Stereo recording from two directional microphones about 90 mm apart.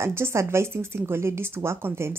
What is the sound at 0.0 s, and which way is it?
A woman's voice, 30° right (ahead or behind).